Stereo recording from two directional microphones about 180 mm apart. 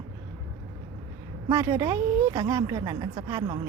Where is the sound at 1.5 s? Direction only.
20° right (ahead or behind).